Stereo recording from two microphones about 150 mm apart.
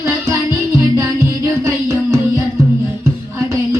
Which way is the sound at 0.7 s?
20° right (ahead or behind).